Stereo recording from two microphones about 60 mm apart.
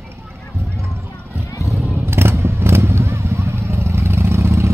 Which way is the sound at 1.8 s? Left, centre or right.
Right.